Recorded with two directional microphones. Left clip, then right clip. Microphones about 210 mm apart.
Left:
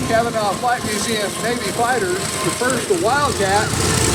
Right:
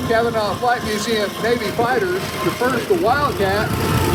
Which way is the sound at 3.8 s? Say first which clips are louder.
Left 1 dB; 5° right (ahead or behind).